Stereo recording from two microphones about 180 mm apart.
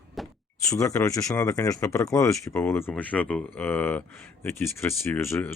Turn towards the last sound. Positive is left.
turn(degrees=15)  # may be behind; listen again after turning